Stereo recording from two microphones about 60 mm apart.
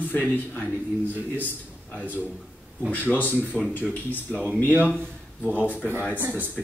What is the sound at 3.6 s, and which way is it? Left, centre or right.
Speech, left.